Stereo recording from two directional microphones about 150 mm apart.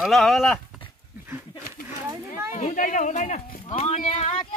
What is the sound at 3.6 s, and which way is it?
Clip-clop, 45° left (ahead or behind).